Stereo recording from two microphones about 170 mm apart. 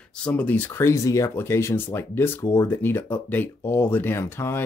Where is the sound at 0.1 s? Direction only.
5° left (ahead or behind).